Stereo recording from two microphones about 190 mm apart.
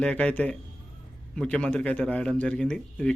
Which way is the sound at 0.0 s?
5° left (ahead or behind).